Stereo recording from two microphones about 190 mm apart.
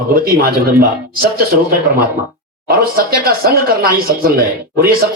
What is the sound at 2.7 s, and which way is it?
Speech, 50° right (ahead or behind).